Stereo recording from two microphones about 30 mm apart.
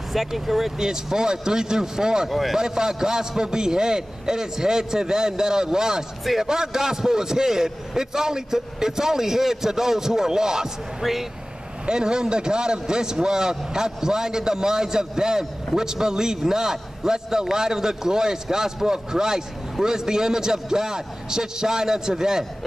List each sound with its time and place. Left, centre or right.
0.1 s a man's voice: centre
0.7 s a man's voice: right
2.2 s speech: centre
2.5 s a man's voice: centre
11.0 s a man's voice: centre
11.8 s a man's voice: right